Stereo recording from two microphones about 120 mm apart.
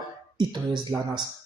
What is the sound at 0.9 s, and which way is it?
Speech, 25° right (ahead or behind).